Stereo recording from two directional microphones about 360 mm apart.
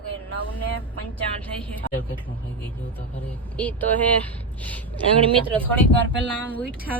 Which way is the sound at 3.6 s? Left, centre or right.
Centre.